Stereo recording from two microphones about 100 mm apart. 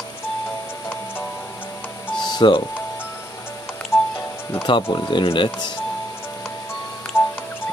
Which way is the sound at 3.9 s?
25° left (ahead or behind).